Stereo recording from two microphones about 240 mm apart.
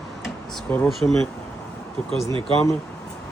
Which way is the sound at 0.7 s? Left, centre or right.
Centre.